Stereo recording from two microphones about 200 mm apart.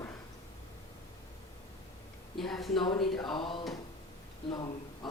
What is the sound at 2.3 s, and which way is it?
Speech, centre (ahead or behind).